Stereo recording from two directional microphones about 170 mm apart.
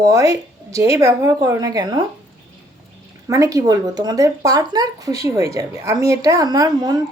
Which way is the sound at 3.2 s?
20° right (ahead or behind).